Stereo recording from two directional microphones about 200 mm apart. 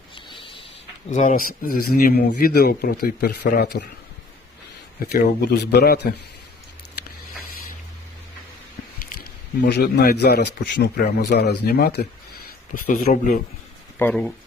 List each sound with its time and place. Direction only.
0.3 s a sound: 25° left (ahead or behind)
1.1 s a man's voice: 40° left (ahead or behind)
5.1 s a man's voice: 50° left (ahead or behind)
9.6 s a man's voice: 55° left (ahead or behind)
14.0 s speech: 5° left (ahead or behind)